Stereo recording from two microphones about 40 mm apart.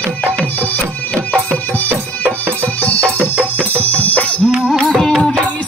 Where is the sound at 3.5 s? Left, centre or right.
Left.